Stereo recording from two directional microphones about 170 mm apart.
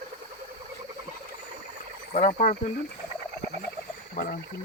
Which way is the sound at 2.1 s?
45° left (ahead or behind).